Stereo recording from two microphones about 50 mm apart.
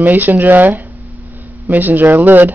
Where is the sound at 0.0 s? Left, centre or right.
Right.